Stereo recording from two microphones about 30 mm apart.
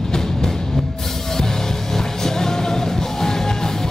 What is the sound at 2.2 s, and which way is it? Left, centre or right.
Music, centre.